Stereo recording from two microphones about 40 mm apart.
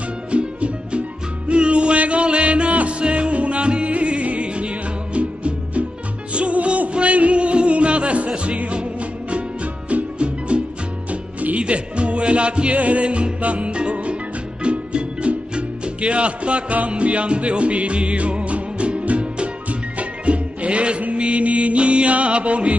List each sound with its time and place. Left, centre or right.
0.3 s music: right
9.8 s music: right